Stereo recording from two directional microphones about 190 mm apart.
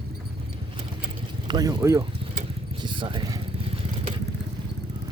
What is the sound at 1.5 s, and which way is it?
Speech, 20° right (ahead or behind).